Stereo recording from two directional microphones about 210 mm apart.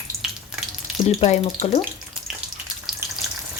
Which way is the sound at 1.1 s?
30° left (ahead or behind).